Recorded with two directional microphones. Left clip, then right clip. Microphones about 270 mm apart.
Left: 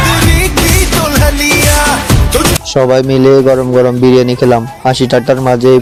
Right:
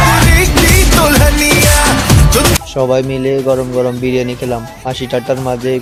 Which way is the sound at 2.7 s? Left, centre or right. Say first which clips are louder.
Left 5 dB; left.